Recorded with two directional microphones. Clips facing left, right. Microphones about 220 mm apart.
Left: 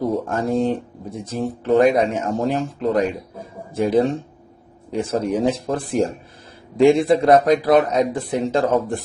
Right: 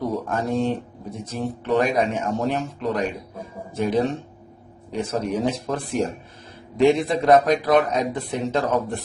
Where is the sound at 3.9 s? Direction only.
30° left (ahead or behind).